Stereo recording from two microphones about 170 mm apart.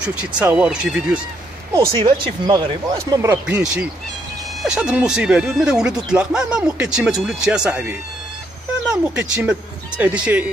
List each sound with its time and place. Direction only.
0.0 s speech: 5° right (ahead or behind)
1.9 s speech: 25° right (ahead or behind); by 7.9 s 5° right (ahead or behind)
9.1 s speech: 5° right (ahead or behind)